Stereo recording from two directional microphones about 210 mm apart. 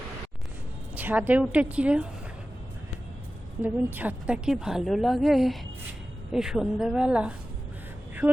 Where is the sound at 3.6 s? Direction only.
10° right (ahead or behind).